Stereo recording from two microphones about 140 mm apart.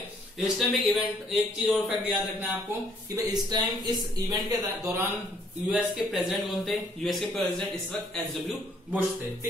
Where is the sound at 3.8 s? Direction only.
30° right (ahead or behind).